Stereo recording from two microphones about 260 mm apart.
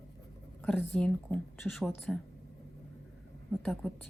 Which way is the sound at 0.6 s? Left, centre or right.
Centre.